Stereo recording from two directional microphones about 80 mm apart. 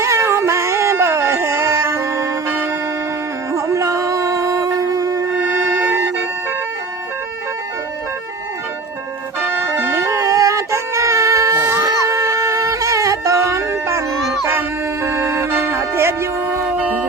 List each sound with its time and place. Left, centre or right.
0.0 s a sound: right
3.5 s music: right
9.4 s music: right
16.7 s music: centre